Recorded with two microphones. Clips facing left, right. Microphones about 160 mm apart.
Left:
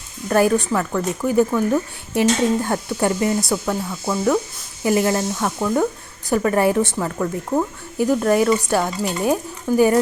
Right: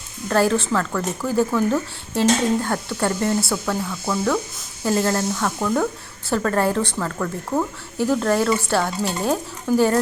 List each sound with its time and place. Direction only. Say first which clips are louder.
0.3 s speech: left 2 dB; 15° left (ahead or behind)